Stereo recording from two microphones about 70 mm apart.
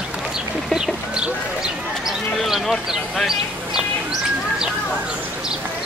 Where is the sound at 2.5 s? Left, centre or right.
Centre.